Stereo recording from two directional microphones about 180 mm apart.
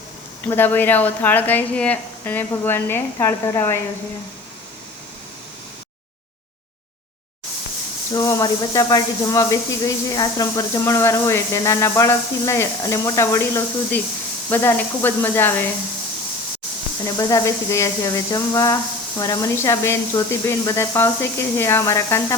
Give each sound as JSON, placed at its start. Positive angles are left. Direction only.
{"t": 0.4, "sound": "speech", "side_deg": 10}
{"t": 8.1, "sound": "speech", "side_deg": 15}
{"t": 17.2, "sound": "speech", "side_deg": 20}